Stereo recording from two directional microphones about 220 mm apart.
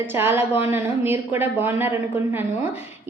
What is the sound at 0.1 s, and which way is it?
A woman's voice, 10° right (ahead or behind).